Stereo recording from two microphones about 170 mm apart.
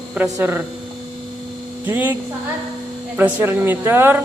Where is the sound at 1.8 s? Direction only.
10° right (ahead or behind).